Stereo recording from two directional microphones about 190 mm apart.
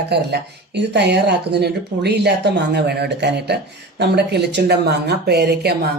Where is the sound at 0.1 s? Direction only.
60° right (ahead or behind).